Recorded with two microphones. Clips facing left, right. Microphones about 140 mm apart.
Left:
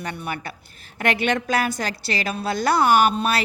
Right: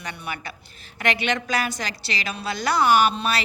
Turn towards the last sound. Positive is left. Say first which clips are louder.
# left 2 dB
turn(degrees=50)  # may be behind; listen again after turning